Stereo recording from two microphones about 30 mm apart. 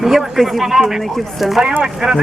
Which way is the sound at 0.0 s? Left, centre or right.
Centre.